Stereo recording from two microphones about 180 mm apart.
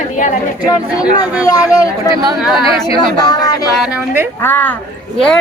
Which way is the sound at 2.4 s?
Centre (ahead or behind).